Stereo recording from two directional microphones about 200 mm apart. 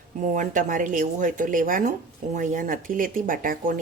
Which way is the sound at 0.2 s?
40° right (ahead or behind).